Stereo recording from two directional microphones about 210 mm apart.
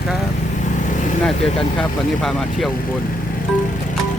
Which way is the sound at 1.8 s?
5° left (ahead or behind).